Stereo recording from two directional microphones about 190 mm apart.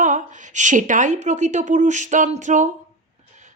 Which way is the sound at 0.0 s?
40° right (ahead or behind).